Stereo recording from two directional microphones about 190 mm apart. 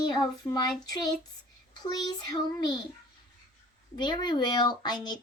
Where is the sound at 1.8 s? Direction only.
20° left (ahead or behind).